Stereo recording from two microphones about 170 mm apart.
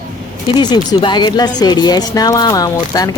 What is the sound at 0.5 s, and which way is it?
Speech, 25° left (ahead or behind).